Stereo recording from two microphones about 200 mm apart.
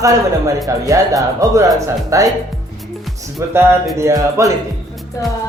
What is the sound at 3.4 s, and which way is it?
Speech, 15° right (ahead or behind).